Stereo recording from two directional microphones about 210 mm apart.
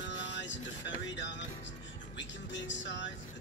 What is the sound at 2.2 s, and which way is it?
Music, 60° left (ahead or behind).